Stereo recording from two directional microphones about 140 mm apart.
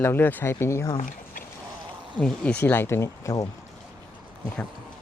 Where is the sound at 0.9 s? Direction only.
75° left (ahead or behind).